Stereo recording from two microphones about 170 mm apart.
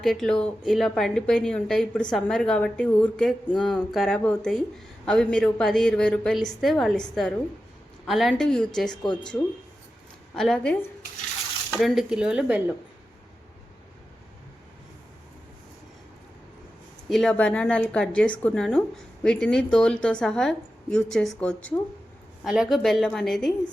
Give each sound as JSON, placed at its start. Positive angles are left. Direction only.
{"t": 0.0, "sound": "a woman's voice", "side_deg": 0}
{"t": 10.3, "sound": "a woman's voice", "side_deg": 0}
{"t": 11.8, "sound": "a woman's voice", "side_deg": 0}
{"t": 17.1, "sound": "a woman's voice", "side_deg": 5}